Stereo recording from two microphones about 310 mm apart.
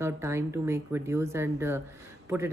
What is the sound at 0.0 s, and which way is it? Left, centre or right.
Speech, centre.